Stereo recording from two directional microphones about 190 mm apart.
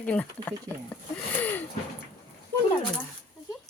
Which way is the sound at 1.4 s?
10° left (ahead or behind).